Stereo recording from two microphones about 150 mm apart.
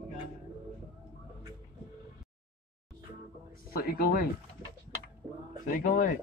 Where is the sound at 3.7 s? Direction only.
90° left.